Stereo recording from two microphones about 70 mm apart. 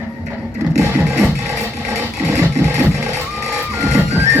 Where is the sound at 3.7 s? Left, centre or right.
Right.